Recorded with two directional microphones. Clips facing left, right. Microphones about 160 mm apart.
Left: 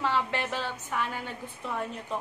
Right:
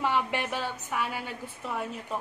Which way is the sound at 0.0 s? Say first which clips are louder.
Right 1 dB; 15° right (ahead or behind).